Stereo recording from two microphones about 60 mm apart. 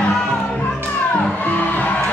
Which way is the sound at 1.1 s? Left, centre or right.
Left.